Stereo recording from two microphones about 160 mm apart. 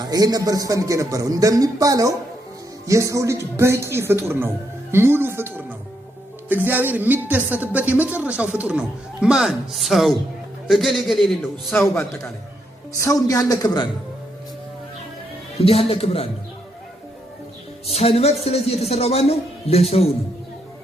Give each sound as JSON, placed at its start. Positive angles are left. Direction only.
{"t": 0.0, "sound": "a man's voice", "side_deg": -25}
{"t": 6.7, "sound": "a woman's voice", "side_deg": -10}
{"t": 11.7, "sound": "a man's voice", "side_deg": 15}
{"t": 15.6, "sound": "a man's voice", "side_deg": 40}
{"t": 17.8, "sound": "a man's voice", "side_deg": 40}